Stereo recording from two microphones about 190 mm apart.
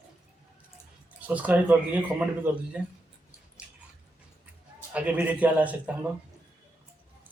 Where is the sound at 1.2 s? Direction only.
10° right (ahead or behind).